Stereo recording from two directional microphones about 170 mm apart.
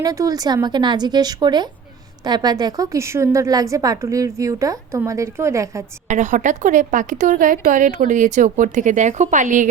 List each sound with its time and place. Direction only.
0.0 s a woman's voice: 20° right (ahead or behind)
6.1 s a woman's voice: 45° right (ahead or behind)